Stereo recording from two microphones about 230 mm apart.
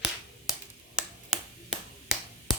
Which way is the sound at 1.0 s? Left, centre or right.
Centre.